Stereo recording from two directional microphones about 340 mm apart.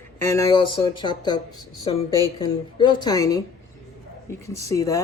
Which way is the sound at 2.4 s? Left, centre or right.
Centre.